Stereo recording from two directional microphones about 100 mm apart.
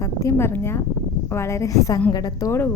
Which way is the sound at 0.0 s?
30° left (ahead or behind).